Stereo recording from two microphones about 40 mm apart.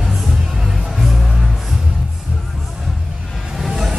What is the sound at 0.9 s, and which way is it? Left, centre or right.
Music, centre.